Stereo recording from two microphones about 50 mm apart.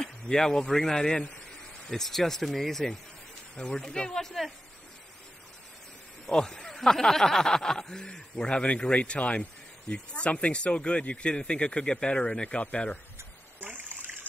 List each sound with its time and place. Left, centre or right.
0.0 s a man's voice: centre
6.2 s speech: centre
13.7 s water: right